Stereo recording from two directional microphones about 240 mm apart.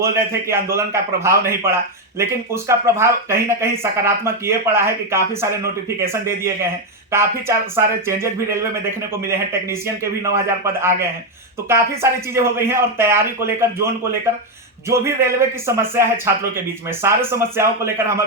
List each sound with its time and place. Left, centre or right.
0.0 s speech: centre
12.3 s speech: centre
14.8 s speech: centre